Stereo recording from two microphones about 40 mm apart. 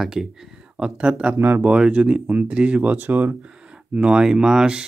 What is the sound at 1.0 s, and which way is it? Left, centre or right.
Speech, right.